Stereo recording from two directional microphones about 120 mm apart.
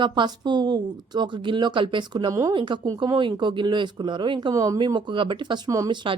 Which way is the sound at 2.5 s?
40° right (ahead or behind).